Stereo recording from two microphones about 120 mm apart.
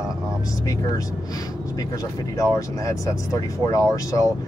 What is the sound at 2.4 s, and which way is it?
Speech, 30° left (ahead or behind).